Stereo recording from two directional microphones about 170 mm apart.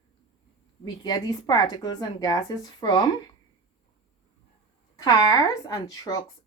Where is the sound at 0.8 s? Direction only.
25° left (ahead or behind).